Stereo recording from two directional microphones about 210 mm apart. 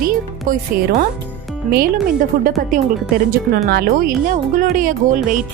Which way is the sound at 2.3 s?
45° right (ahead or behind).